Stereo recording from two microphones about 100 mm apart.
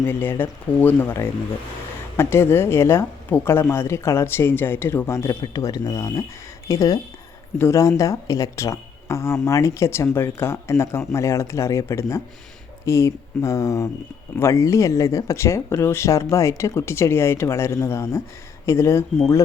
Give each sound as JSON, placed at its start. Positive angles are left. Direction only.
{"t": 0.0, "sound": "speech", "side_deg": 20}